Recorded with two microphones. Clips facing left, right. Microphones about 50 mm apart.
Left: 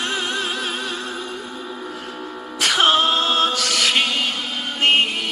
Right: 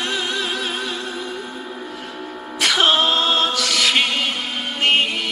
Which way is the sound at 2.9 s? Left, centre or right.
Right.